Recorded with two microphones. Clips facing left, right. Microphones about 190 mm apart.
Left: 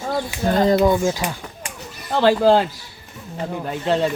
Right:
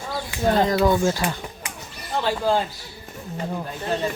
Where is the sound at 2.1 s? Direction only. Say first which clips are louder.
Left 7 dB; 75° left (ahead or behind).